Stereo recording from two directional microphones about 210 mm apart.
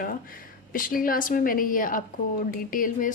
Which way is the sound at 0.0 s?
40° left (ahead or behind).